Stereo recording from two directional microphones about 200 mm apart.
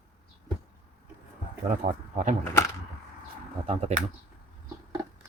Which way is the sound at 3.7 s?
30° right (ahead or behind).